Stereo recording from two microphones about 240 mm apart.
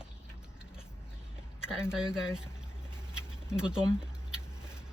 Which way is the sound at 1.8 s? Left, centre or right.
Centre.